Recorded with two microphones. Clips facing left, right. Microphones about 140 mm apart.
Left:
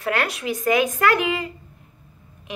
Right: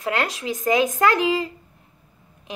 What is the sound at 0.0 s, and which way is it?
Speech, 20° right (ahead or behind).